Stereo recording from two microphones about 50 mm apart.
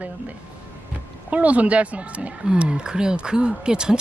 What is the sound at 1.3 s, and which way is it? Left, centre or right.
A woman's voice, right.